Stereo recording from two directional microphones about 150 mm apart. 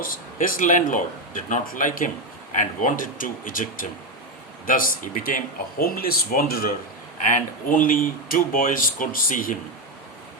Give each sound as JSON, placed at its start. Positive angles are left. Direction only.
{"t": 0.0, "sound": "speech", "side_deg": 65}
{"t": 7.3, "sound": "speech", "side_deg": 60}